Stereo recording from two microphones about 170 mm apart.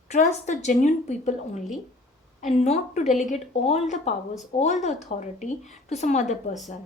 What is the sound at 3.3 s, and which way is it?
Speech, 40° left (ahead or behind).